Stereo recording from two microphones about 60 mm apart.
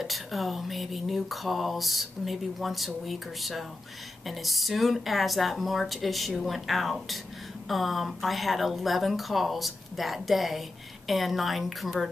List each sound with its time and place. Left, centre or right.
0.0 s speech: centre